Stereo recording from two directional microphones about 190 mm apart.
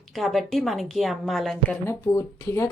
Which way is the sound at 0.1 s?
Centre (ahead or behind).